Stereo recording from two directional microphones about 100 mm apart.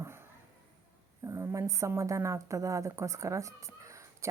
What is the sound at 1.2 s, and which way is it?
Speech, 30° right (ahead or behind).